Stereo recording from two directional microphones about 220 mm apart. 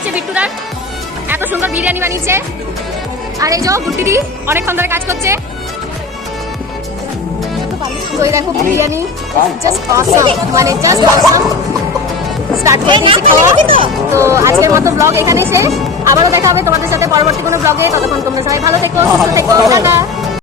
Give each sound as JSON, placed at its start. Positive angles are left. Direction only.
{"t": 0.1, "sound": "music", "side_deg": -5}
{"t": 1.3, "sound": "a woman's voice", "side_deg": -10}
{"t": 3.4, "sound": "speech", "side_deg": -15}
{"t": 8.2, "sound": "speech", "side_deg": -15}
{"t": 12.6, "sound": "speech", "side_deg": -20}
{"t": 14.1, "sound": "speech", "side_deg": -10}